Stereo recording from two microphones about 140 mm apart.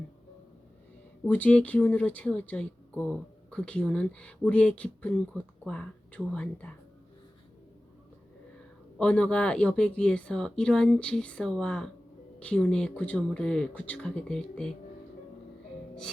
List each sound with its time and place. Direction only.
1.2 s speech: 10° left (ahead or behind)
9.0 s speech: 10° left (ahead or behind)